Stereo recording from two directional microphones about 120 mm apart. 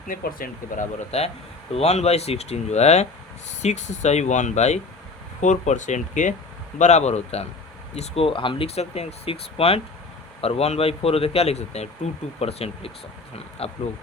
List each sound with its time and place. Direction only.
0.8 s speech: 60° left (ahead or behind)
5.4 s speech: 90° left
6.7 s speech: 75° left (ahead or behind); by 13.7 s 55° left (ahead or behind)